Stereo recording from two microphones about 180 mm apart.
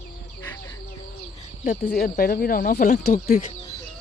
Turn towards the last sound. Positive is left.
turn(degrees=60)  # may be behind; listen again after turning